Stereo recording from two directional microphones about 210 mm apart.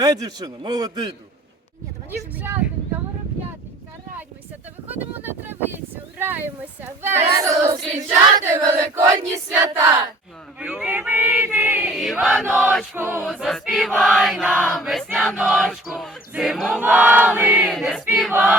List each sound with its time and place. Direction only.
0.0 s a man's voice: 15° right (ahead or behind)
4.9 s speech: 10° right (ahead or behind)
10.6 s choir: 5° right (ahead or behind)